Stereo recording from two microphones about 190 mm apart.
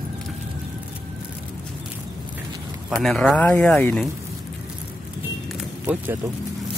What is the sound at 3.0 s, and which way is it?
Speech, 5° left (ahead or behind).